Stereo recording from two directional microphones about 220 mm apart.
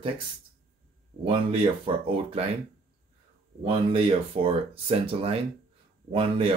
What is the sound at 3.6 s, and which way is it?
Speech, 25° right (ahead or behind).